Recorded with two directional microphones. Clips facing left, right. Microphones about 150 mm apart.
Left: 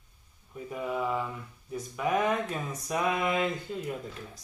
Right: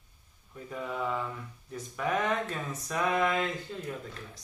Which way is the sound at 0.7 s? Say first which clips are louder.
Left 2 dB; 10° left (ahead or behind).